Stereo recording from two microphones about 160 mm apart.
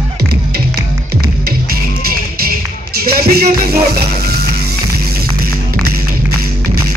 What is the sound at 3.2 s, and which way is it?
Music, 75° right (ahead or behind).